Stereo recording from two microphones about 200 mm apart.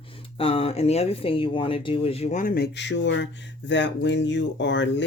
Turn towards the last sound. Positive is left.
turn(degrees=65)  # may be behind; listen again after turning